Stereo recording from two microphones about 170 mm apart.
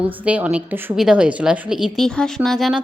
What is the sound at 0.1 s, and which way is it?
A woman's voice, 10° right (ahead or behind).